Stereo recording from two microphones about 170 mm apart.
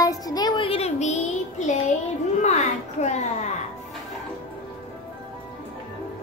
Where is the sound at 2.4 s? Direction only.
40° left (ahead or behind).